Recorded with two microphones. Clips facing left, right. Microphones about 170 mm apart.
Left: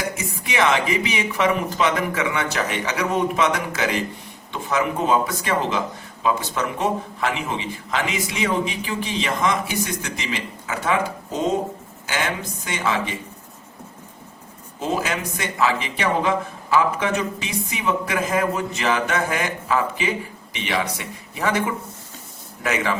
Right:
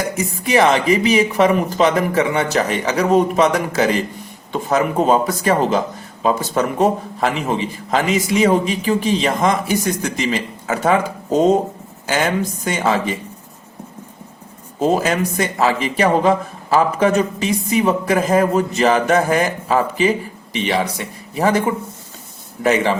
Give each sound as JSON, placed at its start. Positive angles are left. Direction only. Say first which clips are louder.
{"t": 0.4, "sound": "speech", "louder": "right 6 dB", "side_deg": -40}
{"t": 14.8, "sound": "speech", "louder": "right 8 dB", "side_deg": -40}
{"t": 22.6, "sound": "speech", "louder": "right 7 dB", "side_deg": -30}